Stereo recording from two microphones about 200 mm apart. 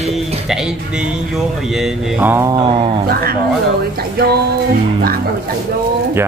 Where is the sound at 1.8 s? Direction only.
10° right (ahead or behind).